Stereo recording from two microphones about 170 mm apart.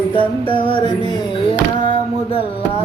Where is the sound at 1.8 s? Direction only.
35° left (ahead or behind).